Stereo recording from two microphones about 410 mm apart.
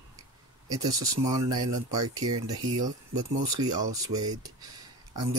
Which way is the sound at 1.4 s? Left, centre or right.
Right.